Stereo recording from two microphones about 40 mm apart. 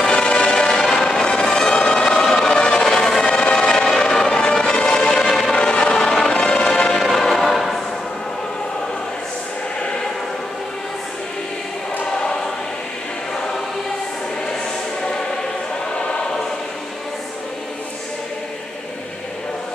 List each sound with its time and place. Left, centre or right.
0.0 s music: left
0.7 s music: centre
5.2 s music: centre
5.6 s music: left
7.0 s music: centre